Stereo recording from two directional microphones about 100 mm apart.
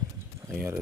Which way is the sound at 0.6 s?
20° right (ahead or behind).